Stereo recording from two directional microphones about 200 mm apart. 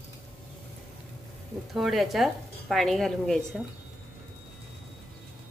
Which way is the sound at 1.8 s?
Centre (ahead or behind).